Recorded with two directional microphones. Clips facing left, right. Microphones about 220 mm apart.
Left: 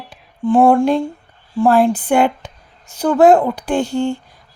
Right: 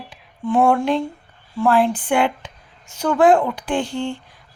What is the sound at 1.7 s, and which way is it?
A woman's voice, 45° left (ahead or behind).